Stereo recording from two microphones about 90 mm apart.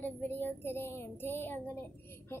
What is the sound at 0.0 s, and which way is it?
Child singing, 20° left (ahead or behind).